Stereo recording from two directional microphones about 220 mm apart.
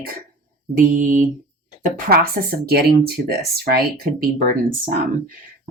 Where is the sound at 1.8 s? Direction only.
40° right (ahead or behind).